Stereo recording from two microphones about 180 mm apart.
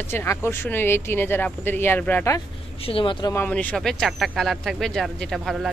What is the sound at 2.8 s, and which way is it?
Speech, 30° left (ahead or behind).